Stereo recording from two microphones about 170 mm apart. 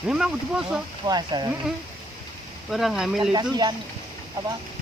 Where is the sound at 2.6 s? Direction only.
Centre (ahead or behind).